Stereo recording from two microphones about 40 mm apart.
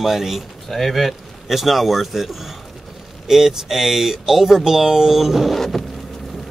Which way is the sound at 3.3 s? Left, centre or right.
Centre.